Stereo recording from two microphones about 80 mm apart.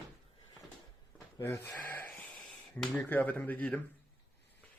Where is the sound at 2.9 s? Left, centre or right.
Left.